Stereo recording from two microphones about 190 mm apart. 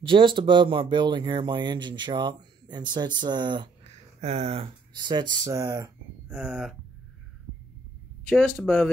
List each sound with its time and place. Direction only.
0.0 s speech: 25° right (ahead or behind)
6.3 s speech: centre (ahead or behind)
8.3 s speech: 5° left (ahead or behind)